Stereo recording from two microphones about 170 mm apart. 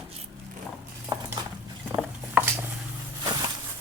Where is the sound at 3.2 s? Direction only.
25° right (ahead or behind).